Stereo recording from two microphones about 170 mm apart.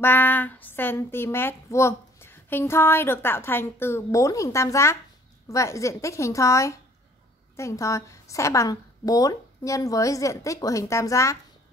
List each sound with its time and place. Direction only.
0.0 s a woman's voice: 10° left (ahead or behind)